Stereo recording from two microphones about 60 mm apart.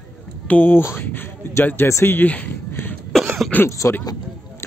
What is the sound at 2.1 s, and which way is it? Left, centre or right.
Speech, left.